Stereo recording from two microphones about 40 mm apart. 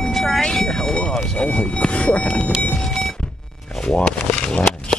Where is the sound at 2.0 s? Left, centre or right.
Left.